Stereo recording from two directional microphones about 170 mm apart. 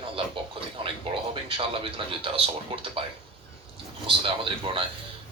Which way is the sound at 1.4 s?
30° right (ahead or behind).